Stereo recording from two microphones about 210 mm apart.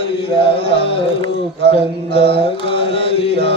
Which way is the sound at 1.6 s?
25° left (ahead or behind).